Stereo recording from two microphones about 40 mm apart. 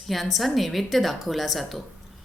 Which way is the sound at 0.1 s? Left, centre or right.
Centre.